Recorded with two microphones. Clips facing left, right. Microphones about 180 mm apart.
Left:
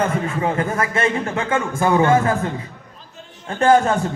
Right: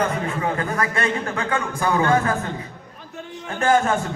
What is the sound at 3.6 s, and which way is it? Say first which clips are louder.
Speech: left 4 dB; 35° left (ahead or behind).